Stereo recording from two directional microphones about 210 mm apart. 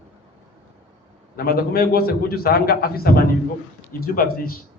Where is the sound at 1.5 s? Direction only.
45° left (ahead or behind).